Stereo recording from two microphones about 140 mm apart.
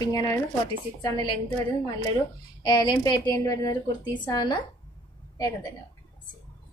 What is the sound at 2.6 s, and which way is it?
Speech, 30° left (ahead or behind).